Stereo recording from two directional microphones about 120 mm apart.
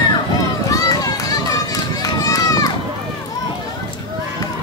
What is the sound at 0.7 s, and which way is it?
Run, 30° left (ahead or behind).